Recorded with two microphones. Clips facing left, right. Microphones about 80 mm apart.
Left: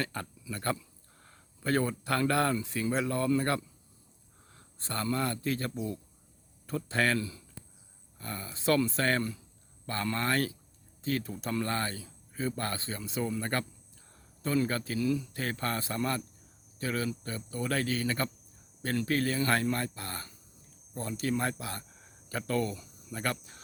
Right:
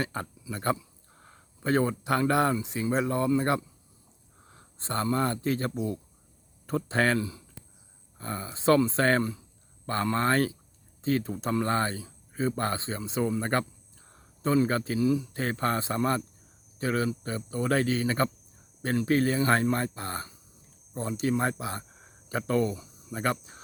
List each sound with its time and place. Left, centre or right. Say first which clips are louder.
0.0 s a man's voice: right 3 dB; right